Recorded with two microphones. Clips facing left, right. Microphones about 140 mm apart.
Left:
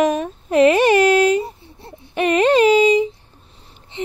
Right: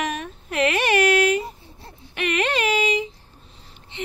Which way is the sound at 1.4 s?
25° left (ahead or behind).